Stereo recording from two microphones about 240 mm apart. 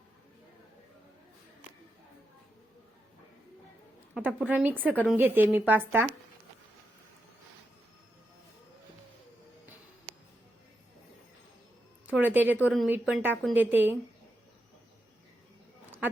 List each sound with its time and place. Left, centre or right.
4.1 s a woman's voice: centre
12.0 s a woman's voice: centre